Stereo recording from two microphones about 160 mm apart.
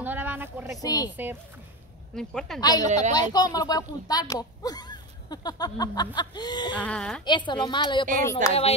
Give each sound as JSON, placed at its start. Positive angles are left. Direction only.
{"t": 0.0, "sound": "a sound", "side_deg": -10}
{"t": 0.8, "sound": "speech", "side_deg": 25}
{"t": 1.1, "sound": "speech", "side_deg": -10}
{"t": 2.1, "sound": "a woman's voice", "side_deg": 5}
{"t": 2.6, "sound": "speech", "side_deg": 25}
{"t": 6.8, "sound": "a woman's voice", "side_deg": 5}
{"t": 7.2, "sound": "speech", "side_deg": 30}
{"t": 8.4, "sound": "speech", "side_deg": -50}